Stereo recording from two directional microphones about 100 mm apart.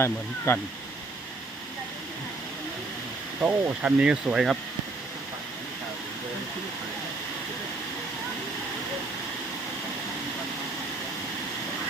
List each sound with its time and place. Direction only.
0.0 s speech: 25° left (ahead or behind)
3.4 s speech: 10° right (ahead or behind)